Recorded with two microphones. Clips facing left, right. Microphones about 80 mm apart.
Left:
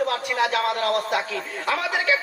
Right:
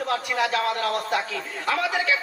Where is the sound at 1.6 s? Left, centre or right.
Centre.